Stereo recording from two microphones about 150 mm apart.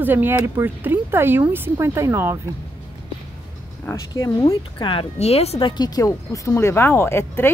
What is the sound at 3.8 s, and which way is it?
Speech, 20° left (ahead or behind).